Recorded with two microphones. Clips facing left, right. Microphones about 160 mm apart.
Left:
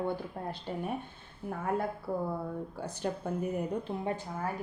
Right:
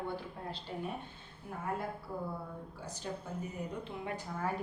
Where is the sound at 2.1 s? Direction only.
55° left (ahead or behind).